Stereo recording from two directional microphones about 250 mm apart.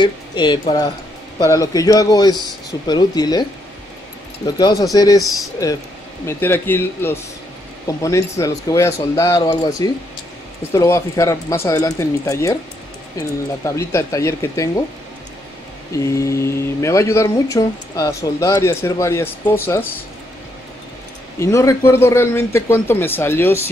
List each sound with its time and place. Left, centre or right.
0.0 s speech: centre
4.6 s speech: centre
13.7 s speech: centre
15.9 s speech: centre
21.4 s speech: centre